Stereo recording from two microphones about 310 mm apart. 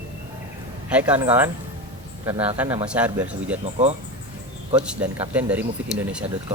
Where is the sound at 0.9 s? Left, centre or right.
Centre.